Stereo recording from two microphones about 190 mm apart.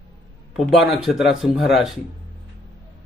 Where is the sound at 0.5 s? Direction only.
Centre (ahead or behind).